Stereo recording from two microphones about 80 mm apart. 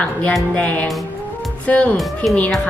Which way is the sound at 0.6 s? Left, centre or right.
Centre.